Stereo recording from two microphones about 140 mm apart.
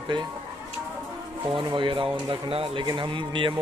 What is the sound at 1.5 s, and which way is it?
Speech, 35° right (ahead or behind).